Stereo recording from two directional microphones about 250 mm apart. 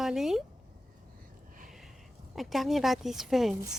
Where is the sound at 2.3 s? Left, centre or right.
Centre.